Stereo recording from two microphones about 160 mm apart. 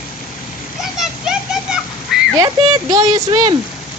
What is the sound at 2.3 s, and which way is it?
Speech, 20° right (ahead or behind).